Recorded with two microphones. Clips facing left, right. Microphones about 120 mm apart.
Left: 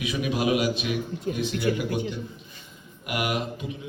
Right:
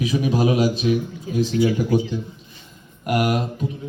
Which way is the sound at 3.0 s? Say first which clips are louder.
Right 7 dB; 40° right (ahead or behind).